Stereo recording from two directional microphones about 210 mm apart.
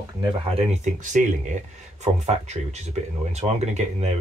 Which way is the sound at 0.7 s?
35° right (ahead or behind).